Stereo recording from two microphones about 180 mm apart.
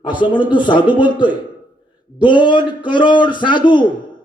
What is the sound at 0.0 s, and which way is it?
A man's voice, 25° left (ahead or behind).